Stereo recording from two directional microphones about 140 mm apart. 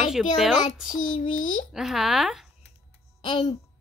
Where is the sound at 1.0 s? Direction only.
65° left (ahead or behind).